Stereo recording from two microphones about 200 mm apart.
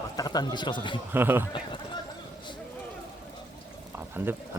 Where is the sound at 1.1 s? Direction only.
10° right (ahead or behind).